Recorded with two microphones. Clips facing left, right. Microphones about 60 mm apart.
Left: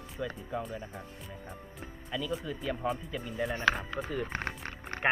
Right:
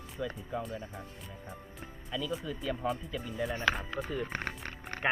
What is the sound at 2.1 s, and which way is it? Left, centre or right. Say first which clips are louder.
Speech: left 1 dB; centre.